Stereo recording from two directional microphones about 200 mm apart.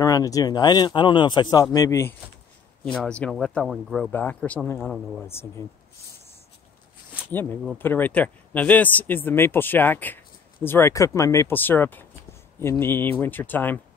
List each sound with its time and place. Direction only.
0.0 s speech: 15° left (ahead or behind); by 5.2 s centre (ahead or behind)
5.2 s speech: 15° left (ahead or behind)
7.2 s speech: 10° left (ahead or behind)